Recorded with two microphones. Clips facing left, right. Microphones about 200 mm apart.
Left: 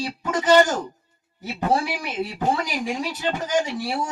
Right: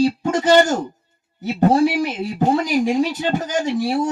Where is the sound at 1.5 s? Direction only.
45° right (ahead or behind).